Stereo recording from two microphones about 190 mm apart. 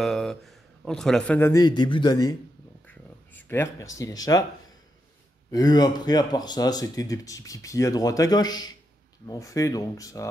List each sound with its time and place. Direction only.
0.0 s a man's voice: centre (ahead or behind)
1.5 s speech: 20° left (ahead or behind)
2.9 s a sound: 10° left (ahead or behind)
4.0 s speech: 20° left (ahead or behind)
5.5 s speech: 20° left (ahead or behind)